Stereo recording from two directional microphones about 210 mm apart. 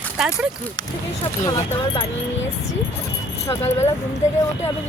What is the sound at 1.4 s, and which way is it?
Speech, 20° left (ahead or behind).